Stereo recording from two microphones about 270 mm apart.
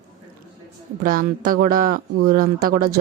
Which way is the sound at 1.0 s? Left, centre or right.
Right.